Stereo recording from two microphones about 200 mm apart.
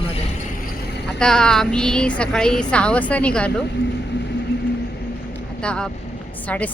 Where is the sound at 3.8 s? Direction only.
60° left (ahead or behind).